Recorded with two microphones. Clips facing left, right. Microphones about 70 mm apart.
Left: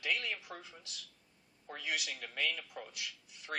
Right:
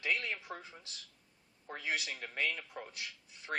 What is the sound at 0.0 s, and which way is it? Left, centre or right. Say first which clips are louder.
A woman's voice: right 1 dB; right.